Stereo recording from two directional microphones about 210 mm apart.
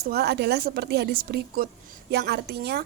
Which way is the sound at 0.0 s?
50° right (ahead or behind).